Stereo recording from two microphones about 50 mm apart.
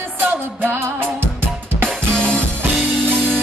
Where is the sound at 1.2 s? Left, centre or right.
Right.